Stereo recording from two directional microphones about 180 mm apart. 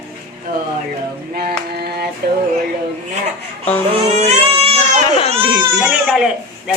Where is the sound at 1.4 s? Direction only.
60° right (ahead or behind).